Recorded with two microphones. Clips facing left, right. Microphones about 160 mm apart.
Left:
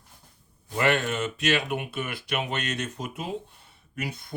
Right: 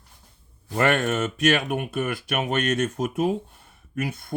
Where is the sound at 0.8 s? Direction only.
50° right (ahead or behind).